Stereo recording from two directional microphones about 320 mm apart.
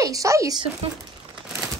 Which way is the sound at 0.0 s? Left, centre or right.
Centre.